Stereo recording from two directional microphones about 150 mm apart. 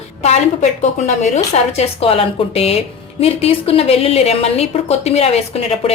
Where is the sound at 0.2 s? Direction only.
50° left (ahead or behind).